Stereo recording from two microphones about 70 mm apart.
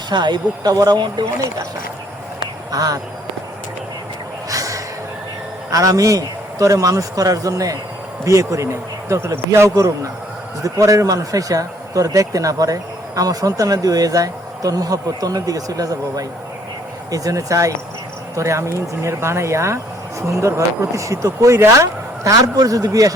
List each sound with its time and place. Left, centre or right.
0.1 s speech: right
2.7 s speech: right
4.4 s snort: right
5.7 s speech: right
22.3 s speech: right